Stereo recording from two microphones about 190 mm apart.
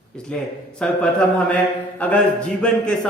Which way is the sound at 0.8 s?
5° left (ahead or behind).